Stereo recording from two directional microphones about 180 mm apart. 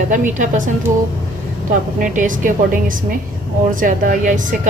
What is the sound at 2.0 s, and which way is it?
A woman's voice, 45° right (ahead or behind).